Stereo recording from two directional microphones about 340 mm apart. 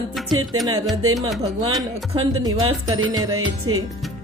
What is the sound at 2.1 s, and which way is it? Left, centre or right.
Speech, centre.